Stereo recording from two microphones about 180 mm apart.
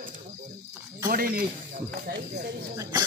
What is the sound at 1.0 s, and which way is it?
Speech, 55° right (ahead or behind).